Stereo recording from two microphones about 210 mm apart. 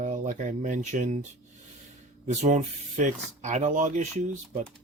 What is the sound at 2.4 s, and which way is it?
Speech, 35° right (ahead or behind).